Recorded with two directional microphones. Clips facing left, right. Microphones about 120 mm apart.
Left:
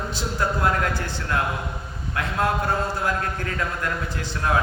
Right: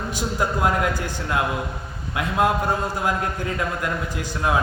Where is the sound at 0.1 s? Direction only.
15° right (ahead or behind).